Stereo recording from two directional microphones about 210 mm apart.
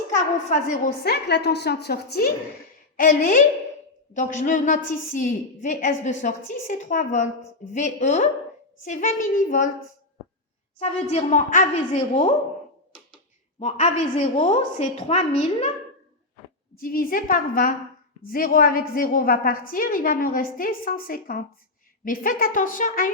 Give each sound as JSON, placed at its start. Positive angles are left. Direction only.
{"t": 0.1, "sound": "a woman's voice", "side_deg": 35}
{"t": 1.1, "sound": "a woman's voice", "side_deg": 50}
{"t": 10.8, "sound": "a woman's voice", "side_deg": 30}
{"t": 13.6, "sound": "a woman's voice", "side_deg": 35}
{"t": 16.7, "sound": "a woman's voice", "side_deg": 40}